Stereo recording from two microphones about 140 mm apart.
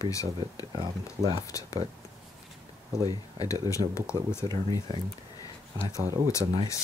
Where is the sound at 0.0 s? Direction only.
25° left (ahead or behind).